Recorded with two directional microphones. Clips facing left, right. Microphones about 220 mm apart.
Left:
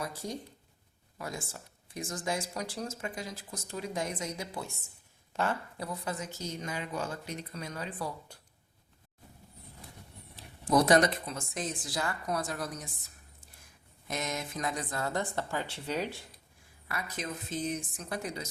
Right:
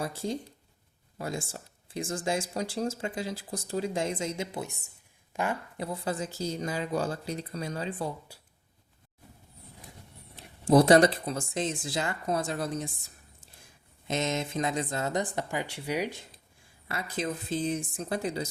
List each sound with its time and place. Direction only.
0.0 s a woman's voice: 30° right (ahead or behind)
10.3 s speech: 30° right (ahead or behind)
16.9 s speech: 30° right (ahead or behind)